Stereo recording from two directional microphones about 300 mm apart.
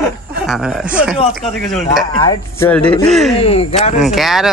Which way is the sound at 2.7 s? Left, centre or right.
Centre.